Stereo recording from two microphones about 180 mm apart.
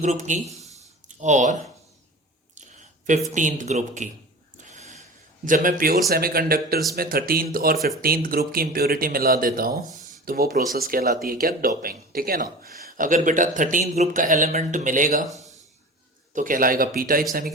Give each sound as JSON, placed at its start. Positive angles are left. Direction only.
{"t": 0.0, "sound": "speech", "side_deg": -40}
{"t": 0.4, "sound": "speech", "side_deg": 0}
{"t": 1.0, "sound": "speech", "side_deg": -40}
{"t": 3.3, "sound": "speech", "side_deg": -45}
{"t": 4.5, "sound": "a sound", "side_deg": -40}
{"t": 5.5, "sound": "a man's voice", "side_deg": -50}
{"t": 15.3, "sound": "a sound", "side_deg": 20}
{"t": 16.3, "sound": "speech", "side_deg": -50}